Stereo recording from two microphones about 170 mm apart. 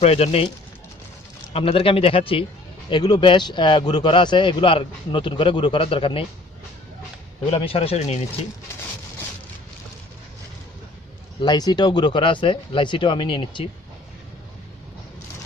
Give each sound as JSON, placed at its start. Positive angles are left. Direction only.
{"t": 0.0, "sound": "a man's voice", "side_deg": 35}
{"t": 1.5, "sound": "a man's voice", "side_deg": 35}
{"t": 7.4, "sound": "a man's voice", "side_deg": 35}
{"t": 11.4, "sound": "speech", "side_deg": 25}